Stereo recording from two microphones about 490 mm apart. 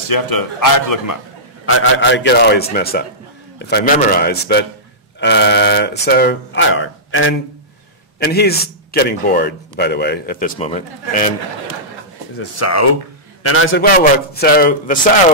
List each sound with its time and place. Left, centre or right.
0.1 s speech: left
1.7 s a man's voice: left
12.4 s a man's voice: left